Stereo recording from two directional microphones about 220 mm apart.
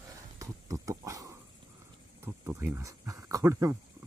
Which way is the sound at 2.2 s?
10° right (ahead or behind).